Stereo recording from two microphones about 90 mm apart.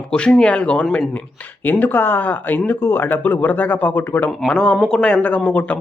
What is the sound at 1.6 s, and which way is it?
Speech, 20° left (ahead or behind).